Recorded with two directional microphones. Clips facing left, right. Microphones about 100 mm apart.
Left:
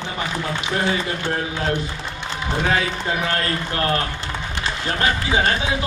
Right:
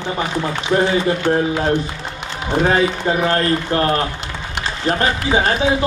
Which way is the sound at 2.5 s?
30° right (ahead or behind).